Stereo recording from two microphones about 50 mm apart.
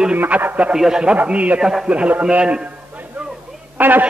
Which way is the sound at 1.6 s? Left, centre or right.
Centre.